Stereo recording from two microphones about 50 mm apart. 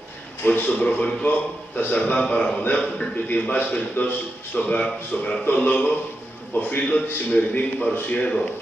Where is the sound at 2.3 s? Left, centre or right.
Left.